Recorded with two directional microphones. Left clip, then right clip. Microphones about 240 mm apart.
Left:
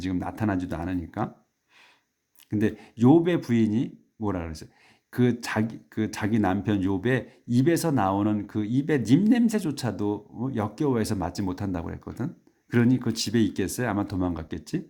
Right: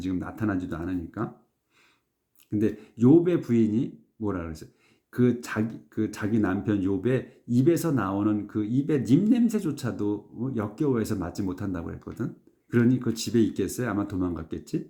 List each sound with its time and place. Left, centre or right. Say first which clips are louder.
0.0 s speech: left 1 dB; left
2.5 s speech: even; left